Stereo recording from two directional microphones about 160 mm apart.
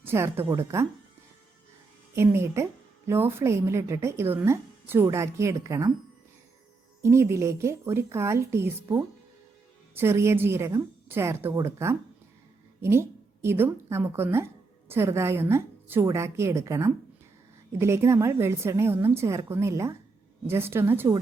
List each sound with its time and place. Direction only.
0.0 s speech: 15° right (ahead or behind)
2.1 s speech: 15° right (ahead or behind)
7.0 s a woman's voice: 15° right (ahead or behind)